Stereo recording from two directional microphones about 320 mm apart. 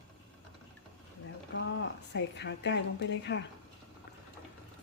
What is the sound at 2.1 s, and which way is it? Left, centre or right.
A woman's voice, left.